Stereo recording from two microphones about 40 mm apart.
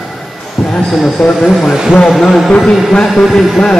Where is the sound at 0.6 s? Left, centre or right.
Centre.